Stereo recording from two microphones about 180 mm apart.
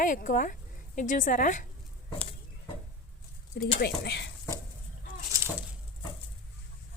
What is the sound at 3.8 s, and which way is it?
Speech, 70° left (ahead or behind).